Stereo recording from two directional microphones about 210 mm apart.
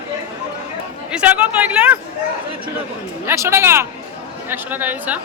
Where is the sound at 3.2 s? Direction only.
15° right (ahead or behind).